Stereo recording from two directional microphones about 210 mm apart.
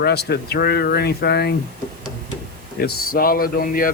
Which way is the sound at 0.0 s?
50° left (ahead or behind).